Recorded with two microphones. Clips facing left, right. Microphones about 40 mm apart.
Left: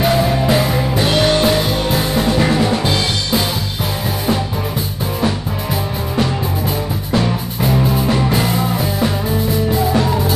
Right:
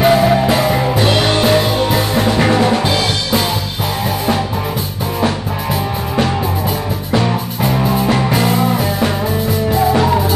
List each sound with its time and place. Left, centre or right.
0.0 s music: centre
0.5 s music: centre
1.0 s music: centre
2.8 s music: centre
7.1 s music: centre
9.9 s music: centre